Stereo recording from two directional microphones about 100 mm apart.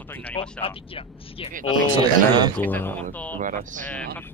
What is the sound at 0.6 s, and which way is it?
Speech, 65° left (ahead or behind).